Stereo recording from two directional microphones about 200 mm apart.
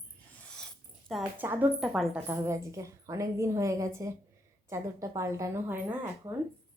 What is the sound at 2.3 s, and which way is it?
Speech, 15° right (ahead or behind).